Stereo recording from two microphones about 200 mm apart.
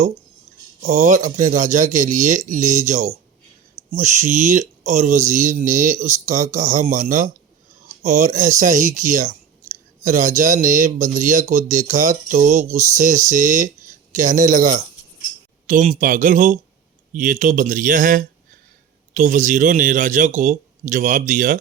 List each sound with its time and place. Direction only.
0.8 s speech: 35° right (ahead or behind)